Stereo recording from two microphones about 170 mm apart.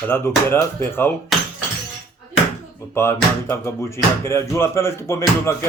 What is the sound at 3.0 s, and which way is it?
Speech, 15° left (ahead or behind).